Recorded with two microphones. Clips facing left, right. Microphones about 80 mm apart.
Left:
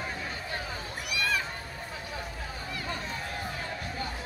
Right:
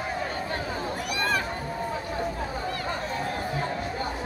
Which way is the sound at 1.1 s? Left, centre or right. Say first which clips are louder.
Right 2 dB; right.